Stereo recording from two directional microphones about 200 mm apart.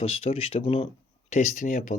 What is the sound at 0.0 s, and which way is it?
Speech, 30° left (ahead or behind).